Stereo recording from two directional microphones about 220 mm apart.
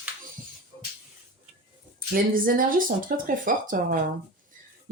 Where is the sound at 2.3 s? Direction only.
40° right (ahead or behind).